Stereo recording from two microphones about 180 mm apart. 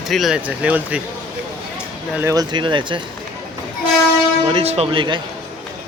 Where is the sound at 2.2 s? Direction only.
20° right (ahead or behind).